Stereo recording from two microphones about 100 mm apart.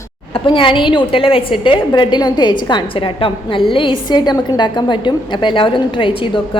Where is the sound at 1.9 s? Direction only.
50° left (ahead or behind).